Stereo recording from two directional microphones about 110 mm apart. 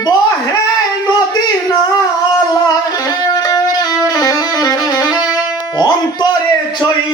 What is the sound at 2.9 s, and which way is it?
Music, 35° left (ahead or behind).